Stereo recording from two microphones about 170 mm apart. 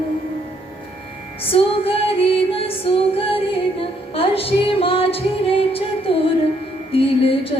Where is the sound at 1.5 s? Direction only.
35° left (ahead or behind).